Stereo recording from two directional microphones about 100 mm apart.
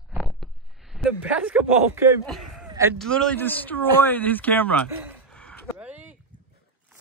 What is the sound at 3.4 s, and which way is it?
Speech, 20° left (ahead or behind).